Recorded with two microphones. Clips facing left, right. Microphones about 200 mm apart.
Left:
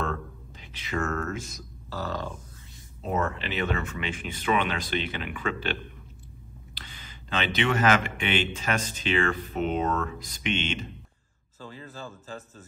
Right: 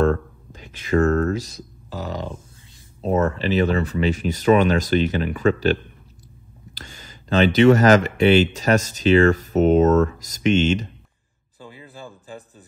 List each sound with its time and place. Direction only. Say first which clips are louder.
0.0 s a sound: right 12 dB; 45° right (ahead or behind)
1.9 s speech: right 3 dB; 15° right (ahead or behind)
3.0 s speech: right 8 dB; 35° right (ahead or behind)
11.6 s speech: right 1 dB; 15° right (ahead or behind)